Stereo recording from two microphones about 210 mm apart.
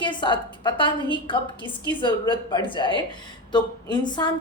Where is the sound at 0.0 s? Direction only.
20° left (ahead or behind).